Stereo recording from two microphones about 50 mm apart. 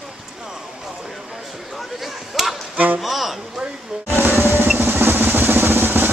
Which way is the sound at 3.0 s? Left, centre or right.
Centre.